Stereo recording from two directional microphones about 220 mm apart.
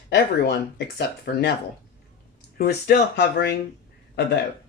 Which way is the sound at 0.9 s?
50° left (ahead or behind).